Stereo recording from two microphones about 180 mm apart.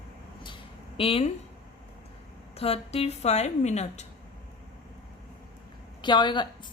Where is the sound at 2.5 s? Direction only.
35° left (ahead or behind).